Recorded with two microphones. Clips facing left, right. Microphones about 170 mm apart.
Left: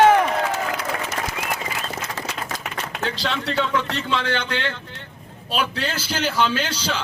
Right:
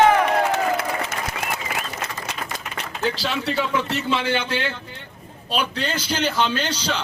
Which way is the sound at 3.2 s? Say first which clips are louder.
Even; 5° right (ahead or behind).